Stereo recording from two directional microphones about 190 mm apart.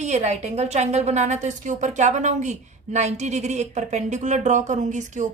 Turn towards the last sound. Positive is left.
turn(degrees=-40)  # may be behind; listen again after turning